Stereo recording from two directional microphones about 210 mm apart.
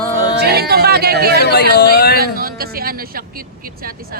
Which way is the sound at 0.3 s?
50° right (ahead or behind).